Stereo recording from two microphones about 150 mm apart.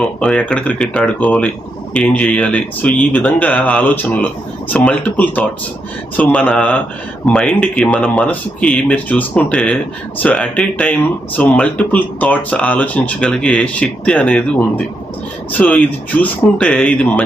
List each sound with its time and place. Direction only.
0.0 s speech: 10° left (ahead or behind)
15.5 s speech: 10° left (ahead or behind)